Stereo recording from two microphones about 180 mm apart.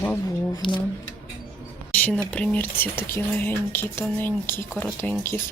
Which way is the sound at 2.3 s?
5° left (ahead or behind).